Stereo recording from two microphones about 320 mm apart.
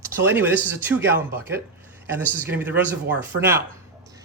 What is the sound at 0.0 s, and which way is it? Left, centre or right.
Speech, centre.